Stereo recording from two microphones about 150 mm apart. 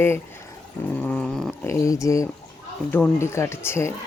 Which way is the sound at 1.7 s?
20° left (ahead or behind).